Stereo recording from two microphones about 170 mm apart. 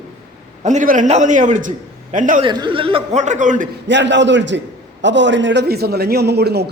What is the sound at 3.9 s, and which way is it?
A man's voice, 90° right.